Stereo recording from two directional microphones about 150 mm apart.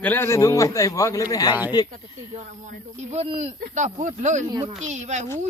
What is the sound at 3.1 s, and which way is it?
Speech, 50° right (ahead or behind).